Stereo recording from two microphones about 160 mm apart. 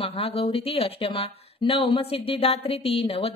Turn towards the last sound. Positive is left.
turn(degrees=35)  # may be behind; listen again after turning